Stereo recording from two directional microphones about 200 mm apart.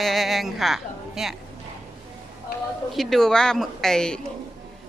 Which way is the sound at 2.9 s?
Centre (ahead or behind).